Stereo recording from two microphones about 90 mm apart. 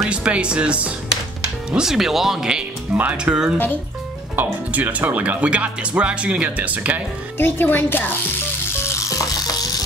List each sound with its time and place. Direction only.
0.1 s speech: 10° right (ahead or behind)
4.4 s speech: 20° right (ahead or behind)
7.3 s speech: 25° left (ahead or behind)
8.8 s rattle: 35° left (ahead or behind)